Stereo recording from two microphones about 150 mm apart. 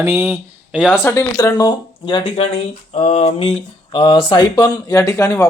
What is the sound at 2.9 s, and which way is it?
Speech, 45° left (ahead or behind).